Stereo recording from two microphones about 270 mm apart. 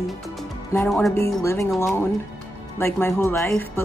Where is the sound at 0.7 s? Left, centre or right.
Centre.